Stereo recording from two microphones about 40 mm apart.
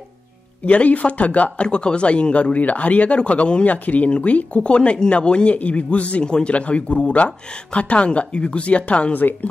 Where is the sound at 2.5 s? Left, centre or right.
Left.